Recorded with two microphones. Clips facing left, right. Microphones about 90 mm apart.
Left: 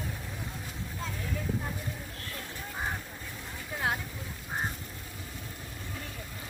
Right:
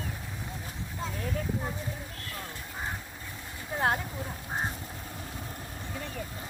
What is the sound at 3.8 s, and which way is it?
Speech, 45° right (ahead or behind).